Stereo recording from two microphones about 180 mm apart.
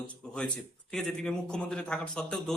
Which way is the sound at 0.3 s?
5° left (ahead or behind).